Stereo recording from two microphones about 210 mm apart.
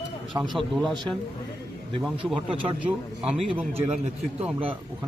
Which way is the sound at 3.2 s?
5° right (ahead or behind).